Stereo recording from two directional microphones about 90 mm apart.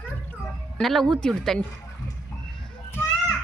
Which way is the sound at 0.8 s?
5° left (ahead or behind).